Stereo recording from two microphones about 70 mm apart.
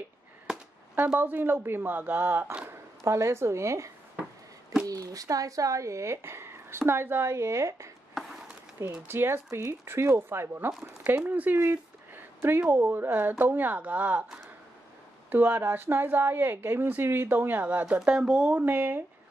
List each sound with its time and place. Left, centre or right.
0.9 s speech: right
3.0 s speech: right
4.8 s speech: right
8.1 s a sound: centre
9.0 s speech: right
10.8 s speech: right
11.6 s a sound: right
12.6 s speech: right
15.2 s speech: right
18.0 s speech: centre
18.5 s speech: right